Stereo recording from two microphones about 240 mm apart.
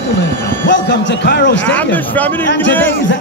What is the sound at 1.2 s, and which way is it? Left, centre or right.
Speech, left.